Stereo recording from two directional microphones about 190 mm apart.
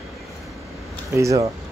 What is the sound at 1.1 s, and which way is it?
Speech, 15° right (ahead or behind).